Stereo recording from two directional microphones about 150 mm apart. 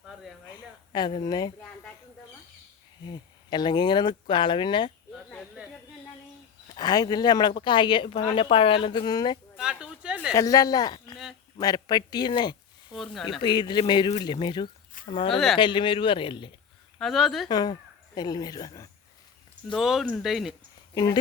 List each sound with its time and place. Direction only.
0.4 s a sound: 30° left (ahead or behind)
3.1 s speech: 30° left (ahead or behind)
6.7 s speech: 25° left (ahead or behind)
9.6 s a sound: 5° right (ahead or behind)
10.3 s speech: 25° left (ahead or behind)
14.9 s a sound: 65° left (ahead or behind)
15.3 s speech: centre (ahead or behind)
15.5 s speech: 35° left (ahead or behind)
17.0 s speech: centre (ahead or behind)
17.5 s speech: 30° left (ahead or behind)
19.7 s speech: centre (ahead or behind)
20.9 s speech: 25° left (ahead or behind)